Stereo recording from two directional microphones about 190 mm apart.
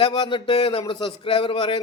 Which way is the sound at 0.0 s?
25° left (ahead or behind).